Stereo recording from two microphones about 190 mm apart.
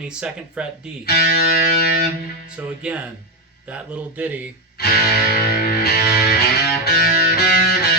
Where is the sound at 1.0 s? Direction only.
55° left (ahead or behind).